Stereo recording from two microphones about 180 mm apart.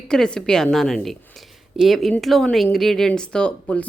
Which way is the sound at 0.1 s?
5° left (ahead or behind).